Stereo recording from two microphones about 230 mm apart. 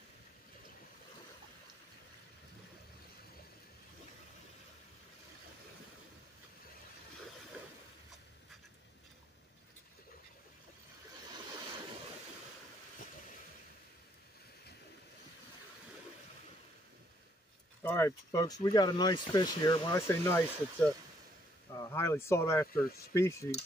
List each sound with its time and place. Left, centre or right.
17.8 s speech: centre